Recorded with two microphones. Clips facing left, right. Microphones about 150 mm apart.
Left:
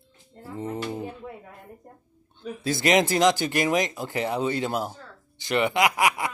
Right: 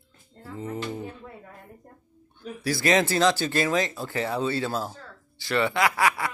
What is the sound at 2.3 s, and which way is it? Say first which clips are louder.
Speech: left 1 dB; 20° left (ahead or behind).